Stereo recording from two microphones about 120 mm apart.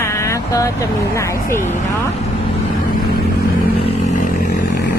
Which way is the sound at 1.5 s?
90° left.